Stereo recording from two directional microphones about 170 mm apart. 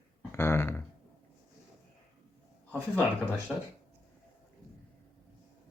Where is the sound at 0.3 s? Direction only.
15° left (ahead or behind).